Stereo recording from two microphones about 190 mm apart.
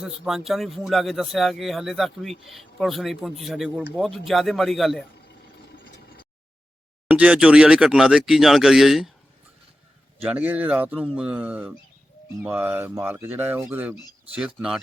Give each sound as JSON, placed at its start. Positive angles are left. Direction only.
{"t": 0.0, "sound": "a man's voice", "side_deg": 0}
{"t": 5.1, "sound": "vehicle", "side_deg": 60}
{"t": 7.1, "sound": "a man's voice", "side_deg": -5}
{"t": 10.2, "sound": "a man's voice", "side_deg": -10}